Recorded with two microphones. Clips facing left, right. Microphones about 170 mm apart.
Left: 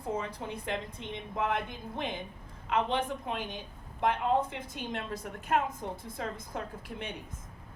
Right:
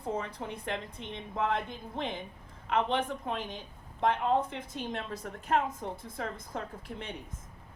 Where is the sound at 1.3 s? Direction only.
30° right (ahead or behind).